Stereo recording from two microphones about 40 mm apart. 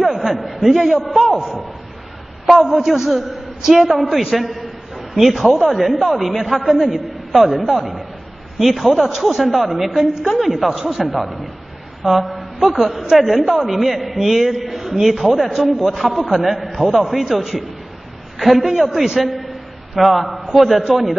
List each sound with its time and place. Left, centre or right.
0.0 s a sound: centre
0.5 s a man's voice: centre
2.4 s a man's voice: centre